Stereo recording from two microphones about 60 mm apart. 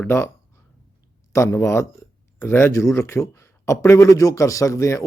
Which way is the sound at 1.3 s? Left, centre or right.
Left.